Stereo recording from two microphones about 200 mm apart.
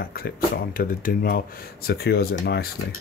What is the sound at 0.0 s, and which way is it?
Speech, 50° left (ahead or behind).